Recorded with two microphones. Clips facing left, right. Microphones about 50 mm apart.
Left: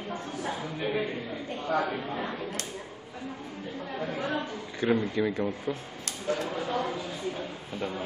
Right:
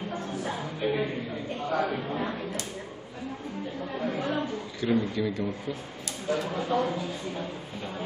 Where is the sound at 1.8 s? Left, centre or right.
Centre.